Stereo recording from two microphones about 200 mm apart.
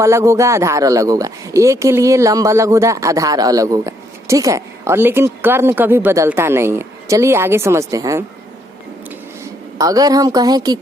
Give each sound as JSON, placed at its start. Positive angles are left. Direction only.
{"t": 0.0, "sound": "speech", "side_deg": -15}
{"t": 9.4, "sound": "a woman's voice", "side_deg": -15}